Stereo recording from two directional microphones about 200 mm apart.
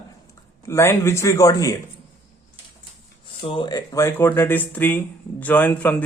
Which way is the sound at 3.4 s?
25° left (ahead or behind).